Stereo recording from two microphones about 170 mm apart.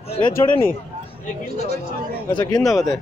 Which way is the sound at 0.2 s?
15° left (ahead or behind).